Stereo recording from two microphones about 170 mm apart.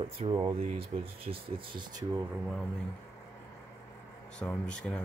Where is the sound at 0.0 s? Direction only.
35° right (ahead or behind).